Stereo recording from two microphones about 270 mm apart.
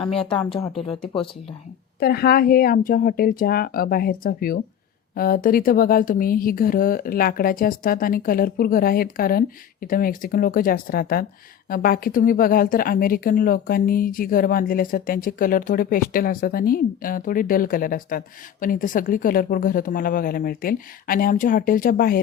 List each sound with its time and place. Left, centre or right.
0.2 s speech: centre
2.0 s speech: left